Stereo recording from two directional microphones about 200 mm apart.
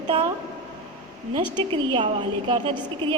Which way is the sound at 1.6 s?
25° right (ahead or behind).